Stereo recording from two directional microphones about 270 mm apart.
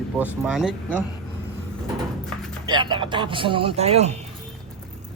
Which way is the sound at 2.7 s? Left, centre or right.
Centre.